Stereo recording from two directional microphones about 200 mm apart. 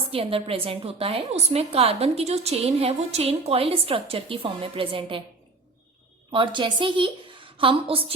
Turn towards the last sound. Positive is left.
turn(degrees=-25)  # may be behind; listen again after turning